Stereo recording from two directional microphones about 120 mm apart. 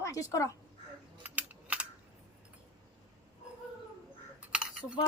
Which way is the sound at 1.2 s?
10° right (ahead or behind).